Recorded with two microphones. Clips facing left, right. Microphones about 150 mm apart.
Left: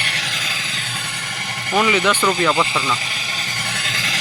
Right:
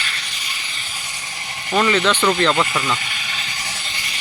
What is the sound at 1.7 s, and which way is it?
Speech, 10° left (ahead or behind).